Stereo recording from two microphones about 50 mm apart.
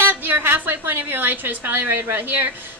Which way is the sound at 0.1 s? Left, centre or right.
Right.